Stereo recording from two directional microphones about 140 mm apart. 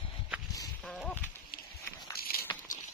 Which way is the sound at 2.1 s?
90° left.